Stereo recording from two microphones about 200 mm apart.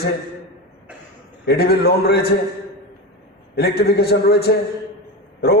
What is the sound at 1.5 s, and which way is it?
Speech, 50° left (ahead or behind).